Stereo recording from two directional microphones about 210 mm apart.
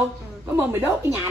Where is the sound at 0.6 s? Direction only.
5° right (ahead or behind).